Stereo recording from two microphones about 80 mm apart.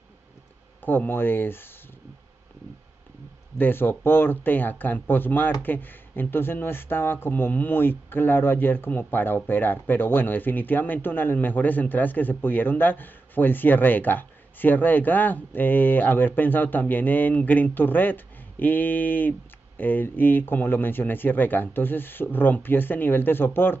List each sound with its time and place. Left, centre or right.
0.8 s speech: left
3.5 s speech: left